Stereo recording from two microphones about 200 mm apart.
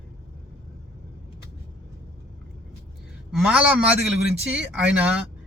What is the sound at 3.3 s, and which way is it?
A man's voice, 5° right (ahead or behind).